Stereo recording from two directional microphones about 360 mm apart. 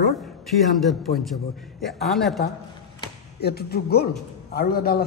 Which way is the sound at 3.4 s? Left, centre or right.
Left.